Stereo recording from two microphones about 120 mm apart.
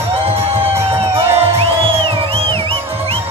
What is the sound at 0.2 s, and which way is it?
Music, 55° right (ahead or behind).